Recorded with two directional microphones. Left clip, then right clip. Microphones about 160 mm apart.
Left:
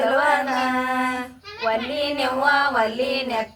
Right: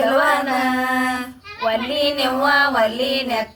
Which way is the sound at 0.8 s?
Centre (ahead or behind).